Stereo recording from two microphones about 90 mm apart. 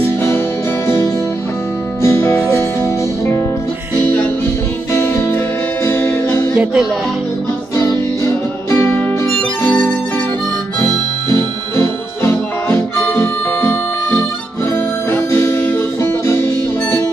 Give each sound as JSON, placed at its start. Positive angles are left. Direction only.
{"t": 0.8, "sound": "music", "side_deg": 30}
{"t": 4.9, "sound": "music", "side_deg": 30}
{"t": 6.5, "sound": "music", "side_deg": -10}
{"t": 7.7, "sound": "music", "side_deg": 40}
{"t": 9.7, "sound": "music", "side_deg": 15}
{"t": 11.2, "sound": "music", "side_deg": 30}